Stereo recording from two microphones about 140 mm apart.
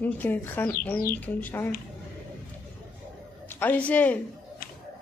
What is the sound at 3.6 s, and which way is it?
Speech, 10° left (ahead or behind).